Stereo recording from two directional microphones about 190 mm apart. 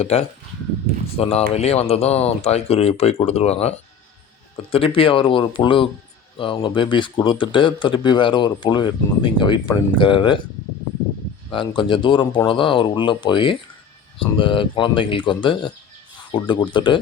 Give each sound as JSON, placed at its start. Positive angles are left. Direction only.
{"t": 0.0, "sound": "speech", "side_deg": 30}
{"t": 11.5, "sound": "speech", "side_deg": 25}